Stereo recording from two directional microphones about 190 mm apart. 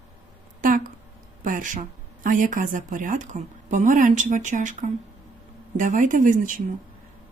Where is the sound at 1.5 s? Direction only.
45° right (ahead or behind).